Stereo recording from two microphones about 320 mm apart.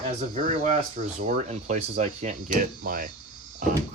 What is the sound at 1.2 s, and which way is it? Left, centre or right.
Speech, right.